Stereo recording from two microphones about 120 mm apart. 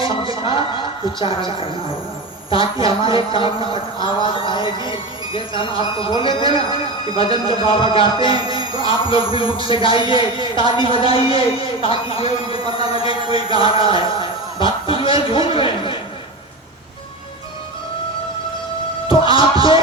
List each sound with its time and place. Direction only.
1.2 s speech: 45° left (ahead or behind)
8.4 s music: 35° right (ahead or behind)
8.8 s speech: 45° left (ahead or behind)
13.6 s chant: 35° right (ahead or behind)
13.8 s a sound: 45° left (ahead or behind)
19.0 s music: 45° left (ahead or behind)